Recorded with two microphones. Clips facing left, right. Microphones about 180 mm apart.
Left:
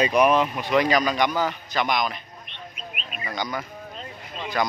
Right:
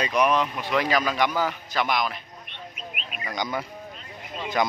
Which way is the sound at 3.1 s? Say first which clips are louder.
Left 2 dB; 10° right (ahead or behind).